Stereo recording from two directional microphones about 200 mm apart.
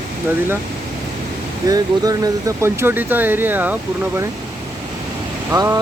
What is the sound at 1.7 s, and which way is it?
Speech, 20° right (ahead or behind).